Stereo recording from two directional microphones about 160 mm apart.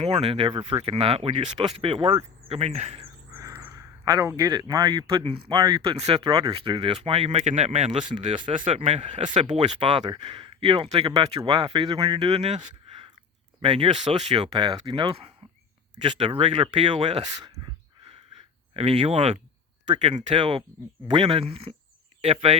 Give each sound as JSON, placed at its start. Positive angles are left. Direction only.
{"t": 0.0, "sound": "speech", "side_deg": -40}
{"t": 3.3, "sound": "speech", "side_deg": -20}
{"t": 8.0, "sound": "speech", "side_deg": -30}
{"t": 13.6, "sound": "speech", "side_deg": -35}
{"t": 18.7, "sound": "speech", "side_deg": -35}